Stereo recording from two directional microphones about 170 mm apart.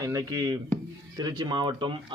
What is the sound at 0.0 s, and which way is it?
Speech, 20° right (ahead or behind).